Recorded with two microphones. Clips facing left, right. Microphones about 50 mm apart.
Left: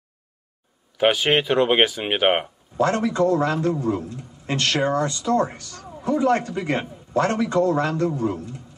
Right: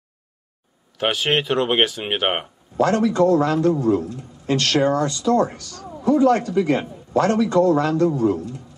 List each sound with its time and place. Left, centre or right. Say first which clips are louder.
1.0 s speech: left 2 dB; centre
2.8 s a man's voice: right 3 dB; left